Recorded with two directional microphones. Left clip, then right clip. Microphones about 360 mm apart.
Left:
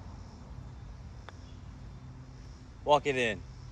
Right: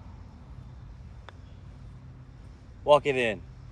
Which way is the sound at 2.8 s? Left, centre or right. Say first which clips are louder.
Right 5 dB; right.